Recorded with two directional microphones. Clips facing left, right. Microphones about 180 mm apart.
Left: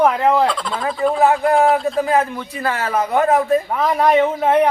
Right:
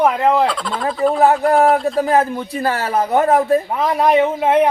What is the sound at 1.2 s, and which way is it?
Speech, 35° right (ahead or behind).